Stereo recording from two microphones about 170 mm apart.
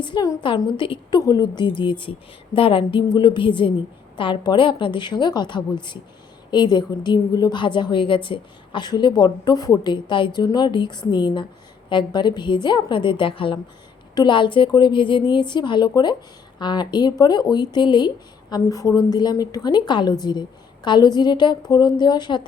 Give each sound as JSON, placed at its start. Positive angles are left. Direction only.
{"t": 0.0, "sound": "a woman's voice", "side_deg": 25}